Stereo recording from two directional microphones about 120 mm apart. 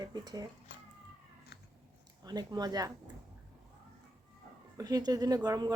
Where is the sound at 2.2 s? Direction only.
35° right (ahead or behind).